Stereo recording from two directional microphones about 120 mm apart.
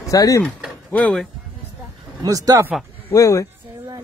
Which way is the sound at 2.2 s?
30° right (ahead or behind).